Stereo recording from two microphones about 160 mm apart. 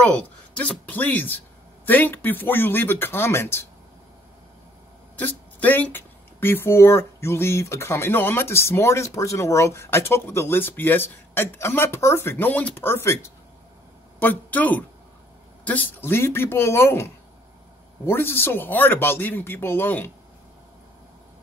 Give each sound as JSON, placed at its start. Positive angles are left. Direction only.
{"t": 0.0, "sound": "speech", "side_deg": 10}
{"t": 5.2, "sound": "speech", "side_deg": 10}